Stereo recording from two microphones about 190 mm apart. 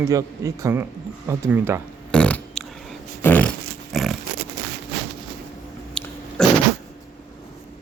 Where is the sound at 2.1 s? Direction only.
5° left (ahead or behind).